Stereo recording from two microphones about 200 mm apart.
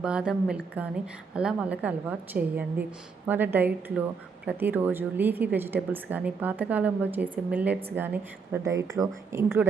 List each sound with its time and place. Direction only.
0.0 s a woman's voice: 5° right (ahead or behind)